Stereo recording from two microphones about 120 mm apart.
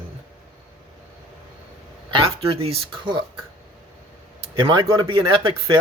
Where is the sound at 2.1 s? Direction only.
50° right (ahead or behind).